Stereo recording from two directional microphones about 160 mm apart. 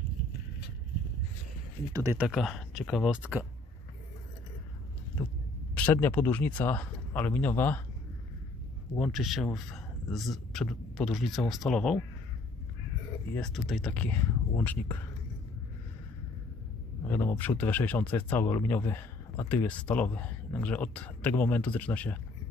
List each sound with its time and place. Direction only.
1.9 s speech: 20° right (ahead or behind)
2.1 s speech: centre (ahead or behind)
5.8 s speech: 10° left (ahead or behind)
8.9 s a man's voice: 5° left (ahead or behind)
13.4 s speech: 5° left (ahead or behind)
17.1 s speech: 15° left (ahead or behind)